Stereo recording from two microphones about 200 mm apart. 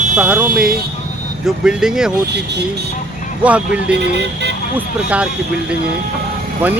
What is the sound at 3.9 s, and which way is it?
Speech, 60° right (ahead or behind).